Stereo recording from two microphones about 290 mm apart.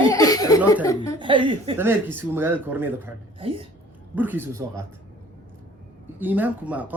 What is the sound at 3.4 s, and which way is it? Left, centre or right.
Speech, centre.